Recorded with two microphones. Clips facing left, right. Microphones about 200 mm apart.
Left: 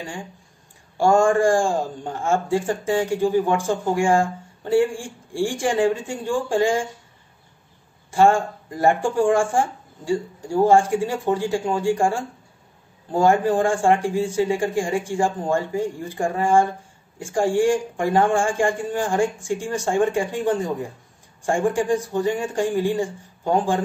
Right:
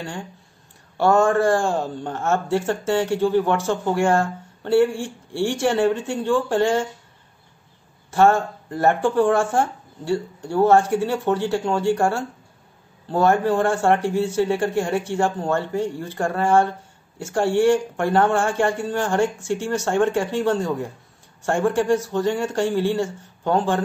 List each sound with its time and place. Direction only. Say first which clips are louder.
0.9 s a man's voice: even; 10° left (ahead or behind)
8.1 s a man's voice: even; 10° left (ahead or behind)